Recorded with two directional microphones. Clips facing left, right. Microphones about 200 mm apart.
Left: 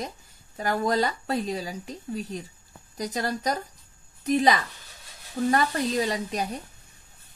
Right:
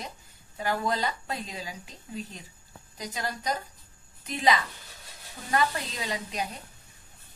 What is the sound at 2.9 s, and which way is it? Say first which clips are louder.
A woman's voice: left 6 dB; 40° left (ahead or behind).